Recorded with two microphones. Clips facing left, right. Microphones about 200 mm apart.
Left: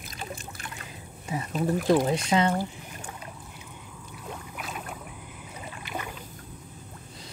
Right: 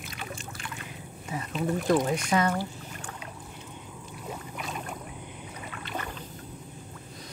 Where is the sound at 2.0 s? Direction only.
25° left (ahead or behind).